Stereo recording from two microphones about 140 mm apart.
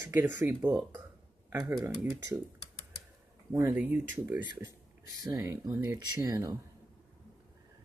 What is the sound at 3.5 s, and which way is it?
Speech, 15° right (ahead or behind).